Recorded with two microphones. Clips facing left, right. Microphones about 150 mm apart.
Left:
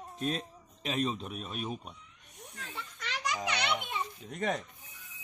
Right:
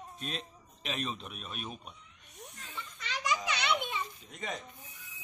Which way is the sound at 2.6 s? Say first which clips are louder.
Left 3 dB; 65° left (ahead or behind).